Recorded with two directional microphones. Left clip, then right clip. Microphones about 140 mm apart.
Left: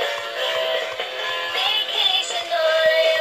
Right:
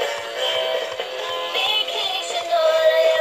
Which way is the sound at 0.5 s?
50° right (ahead or behind).